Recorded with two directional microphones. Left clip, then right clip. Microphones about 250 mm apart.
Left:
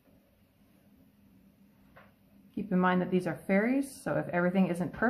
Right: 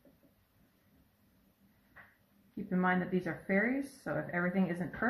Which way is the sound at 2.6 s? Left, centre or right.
Centre.